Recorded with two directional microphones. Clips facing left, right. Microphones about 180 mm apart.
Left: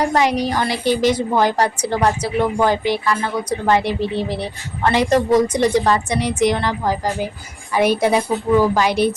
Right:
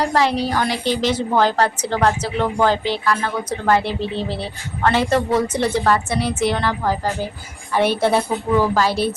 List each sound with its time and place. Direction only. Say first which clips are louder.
0.0 s a woman's voice: left 1 dB; 20° left (ahead or behind)